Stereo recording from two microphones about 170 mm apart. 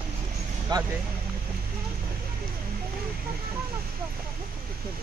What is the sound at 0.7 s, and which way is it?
Speech, 25° right (ahead or behind).